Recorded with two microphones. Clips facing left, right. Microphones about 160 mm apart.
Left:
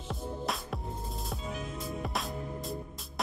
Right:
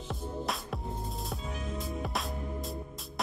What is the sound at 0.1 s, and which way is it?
Music, centre (ahead or behind).